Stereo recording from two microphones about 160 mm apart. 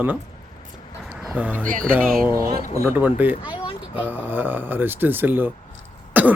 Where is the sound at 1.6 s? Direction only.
60° right (ahead or behind).